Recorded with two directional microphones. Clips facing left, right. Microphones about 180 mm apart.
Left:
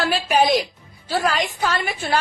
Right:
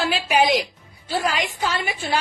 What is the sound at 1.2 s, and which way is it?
Speech, 15° right (ahead or behind).